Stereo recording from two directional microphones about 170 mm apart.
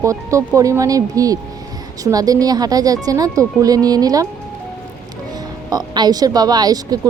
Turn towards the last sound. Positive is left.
turn(degrees=-20)  # may be behind; listen again after turning